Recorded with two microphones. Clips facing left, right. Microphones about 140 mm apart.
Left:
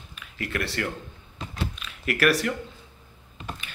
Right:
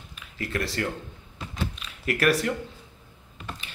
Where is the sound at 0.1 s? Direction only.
30° right (ahead or behind).